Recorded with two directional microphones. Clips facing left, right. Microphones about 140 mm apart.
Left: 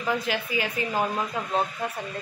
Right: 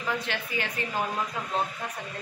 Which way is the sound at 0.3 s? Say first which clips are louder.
Left 4 dB; 10° left (ahead or behind).